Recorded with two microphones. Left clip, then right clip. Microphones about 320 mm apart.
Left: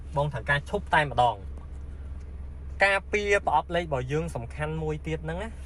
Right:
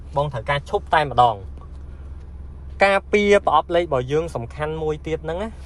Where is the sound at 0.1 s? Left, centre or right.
Right.